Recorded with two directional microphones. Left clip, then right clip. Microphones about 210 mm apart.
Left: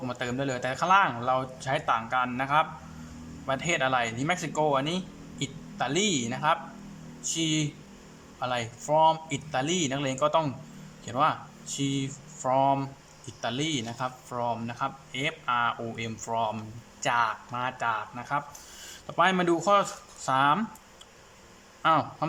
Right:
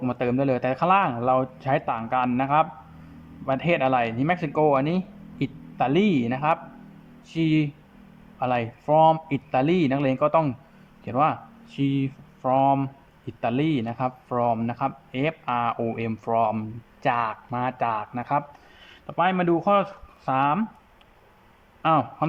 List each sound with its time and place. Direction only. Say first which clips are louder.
0.0 s speech: right 7 dB; 15° right (ahead or behind)
19.0 s speech: right 1 dB; 5° right (ahead or behind)
21.8 s a man's voice: right 3 dB; 10° right (ahead or behind)